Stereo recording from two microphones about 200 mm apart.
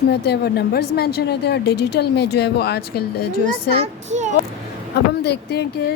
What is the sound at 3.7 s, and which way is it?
Speech, 35° right (ahead or behind).